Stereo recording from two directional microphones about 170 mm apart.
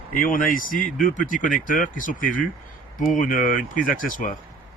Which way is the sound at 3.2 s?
50° left (ahead or behind).